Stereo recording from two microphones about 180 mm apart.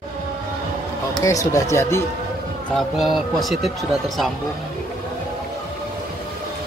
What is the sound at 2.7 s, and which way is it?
Speech, centre (ahead or behind).